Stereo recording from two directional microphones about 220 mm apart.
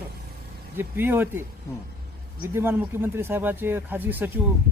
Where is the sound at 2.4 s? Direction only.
10° right (ahead or behind).